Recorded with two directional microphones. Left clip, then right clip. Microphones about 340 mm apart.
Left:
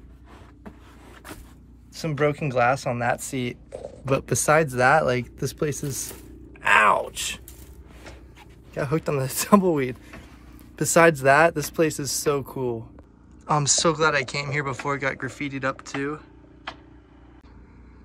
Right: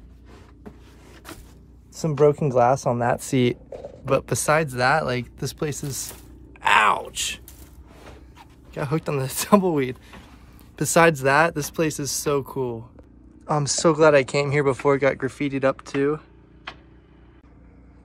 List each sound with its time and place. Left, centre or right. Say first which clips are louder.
2.0 s speech: right 5 dB; centre
4.1 s speech: even; centre
6.6 s groan: even; centre
7.1 s speech: right 2 dB; centre
8.0 s speech: even; centre